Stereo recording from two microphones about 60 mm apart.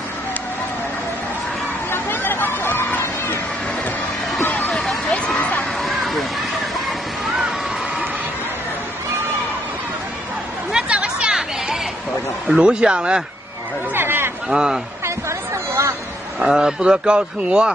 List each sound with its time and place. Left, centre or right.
1.9 s a sound: left
4.5 s vehicle: left
5.4 s a sound: left
5.8 s a sound: centre
10.7 s chatter: centre
12.4 s a man's voice: centre
13.9 s chatter: right
14.5 s a man's voice: centre
15.0 s chatter: right
16.3 s a man's voice: centre